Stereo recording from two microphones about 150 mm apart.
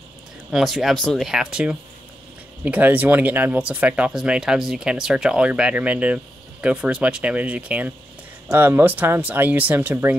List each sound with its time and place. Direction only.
0.5 s speech: centre (ahead or behind)